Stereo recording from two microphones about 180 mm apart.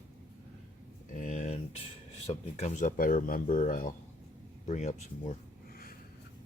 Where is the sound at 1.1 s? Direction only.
40° left (ahead or behind).